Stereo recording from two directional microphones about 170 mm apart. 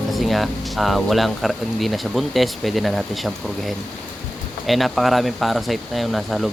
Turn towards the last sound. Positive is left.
turn(degrees=0)  # may be behind; listen again after turning